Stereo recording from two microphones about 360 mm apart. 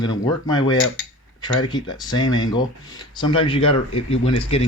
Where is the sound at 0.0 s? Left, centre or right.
Centre.